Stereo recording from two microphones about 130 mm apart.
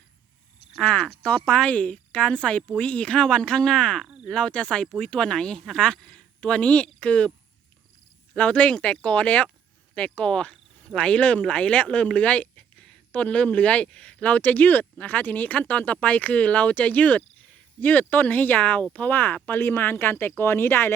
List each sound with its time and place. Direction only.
0.8 s speech: 10° left (ahead or behind)
8.3 s speech: 10° left (ahead or behind)